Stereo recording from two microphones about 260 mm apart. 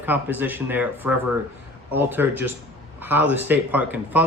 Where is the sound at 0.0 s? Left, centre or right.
Centre.